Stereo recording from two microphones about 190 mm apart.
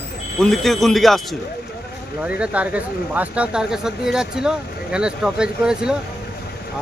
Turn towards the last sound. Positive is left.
turn(degrees=-5)  # may be behind; listen again after turning